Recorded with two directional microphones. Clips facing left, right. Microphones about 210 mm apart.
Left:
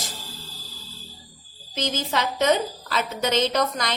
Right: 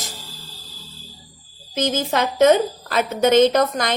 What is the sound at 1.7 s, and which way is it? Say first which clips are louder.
A woman's voice: right 5 dB; 50° right (ahead or behind).